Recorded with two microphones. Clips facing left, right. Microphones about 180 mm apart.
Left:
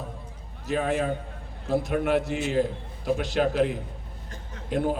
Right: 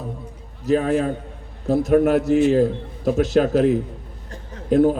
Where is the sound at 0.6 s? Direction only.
40° right (ahead or behind).